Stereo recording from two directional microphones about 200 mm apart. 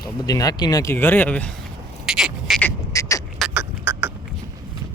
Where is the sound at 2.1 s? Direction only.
5° right (ahead or behind).